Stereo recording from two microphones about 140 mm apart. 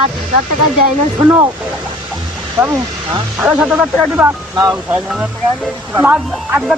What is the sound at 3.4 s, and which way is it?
Speech, 10° right (ahead or behind).